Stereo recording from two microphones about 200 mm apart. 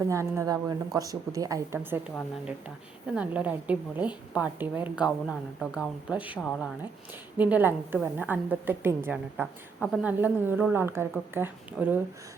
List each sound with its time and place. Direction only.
0.1 s a woman's voice: 15° right (ahead or behind)
3.2 s a woman's voice: 5° right (ahead or behind)
6.4 s speech: 5° left (ahead or behind)
7.3 s a woman's voice: 10° right (ahead or behind)